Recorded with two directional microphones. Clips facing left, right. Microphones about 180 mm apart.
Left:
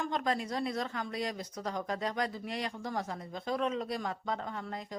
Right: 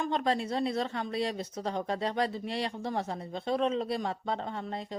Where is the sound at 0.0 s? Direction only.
25° right (ahead or behind).